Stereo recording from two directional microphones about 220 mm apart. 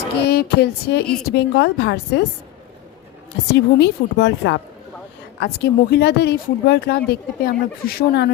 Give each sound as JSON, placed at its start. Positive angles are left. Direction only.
{"t": 0.3, "sound": "speech", "side_deg": 45}
{"t": 3.5, "sound": "speech", "side_deg": 50}